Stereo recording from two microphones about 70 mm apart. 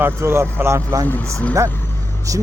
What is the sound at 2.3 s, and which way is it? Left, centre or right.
Speech, right.